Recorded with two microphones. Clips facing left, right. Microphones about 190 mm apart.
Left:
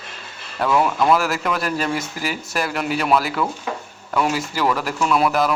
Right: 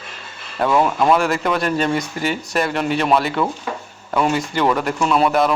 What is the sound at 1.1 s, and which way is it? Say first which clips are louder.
Speech: right 2 dB; centre (ahead or behind).